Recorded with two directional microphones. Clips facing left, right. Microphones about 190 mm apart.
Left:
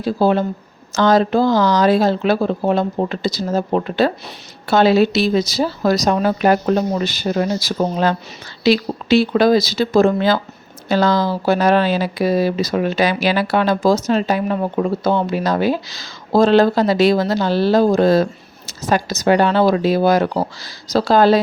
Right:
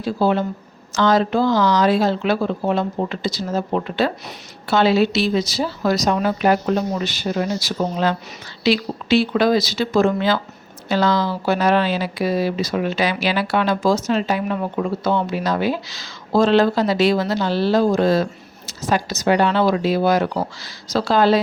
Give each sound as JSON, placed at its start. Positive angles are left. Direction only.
{"t": 0.0, "sound": "speech", "side_deg": 40}